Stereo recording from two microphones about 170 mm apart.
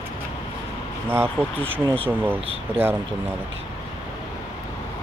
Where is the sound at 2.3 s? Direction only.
35° right (ahead or behind).